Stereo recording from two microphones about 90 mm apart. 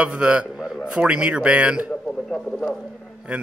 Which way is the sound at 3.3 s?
10° right (ahead or behind).